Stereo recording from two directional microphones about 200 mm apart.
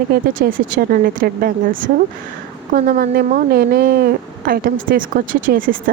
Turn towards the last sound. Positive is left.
turn(degrees=-45)  # may be behind; listen again after turning